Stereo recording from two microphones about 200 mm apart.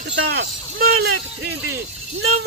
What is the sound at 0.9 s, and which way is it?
Speech, 80° right.